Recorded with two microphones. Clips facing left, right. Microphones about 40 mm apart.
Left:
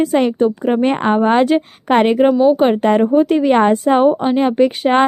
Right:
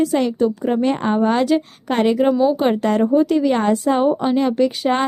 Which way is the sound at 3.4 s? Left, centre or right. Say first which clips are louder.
Left 4 dB; left.